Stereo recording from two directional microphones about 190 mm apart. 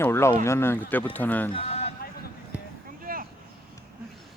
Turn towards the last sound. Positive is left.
turn(degrees=-50)  # may be behind; listen again after turning